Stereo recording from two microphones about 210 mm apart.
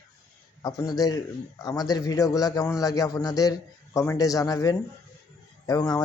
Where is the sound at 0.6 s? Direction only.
20° left (ahead or behind).